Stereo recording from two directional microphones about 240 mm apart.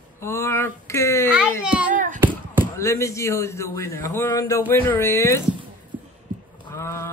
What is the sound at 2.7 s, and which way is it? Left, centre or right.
A man's voice, centre.